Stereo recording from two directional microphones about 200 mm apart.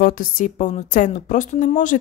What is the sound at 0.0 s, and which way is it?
Speech, 45° left (ahead or behind).